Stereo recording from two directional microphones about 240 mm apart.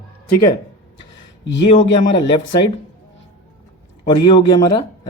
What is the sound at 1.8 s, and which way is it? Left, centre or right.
Speech, left.